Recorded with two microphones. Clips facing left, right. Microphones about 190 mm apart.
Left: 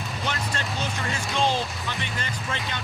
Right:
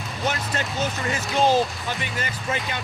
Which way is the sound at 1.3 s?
45° right (ahead or behind).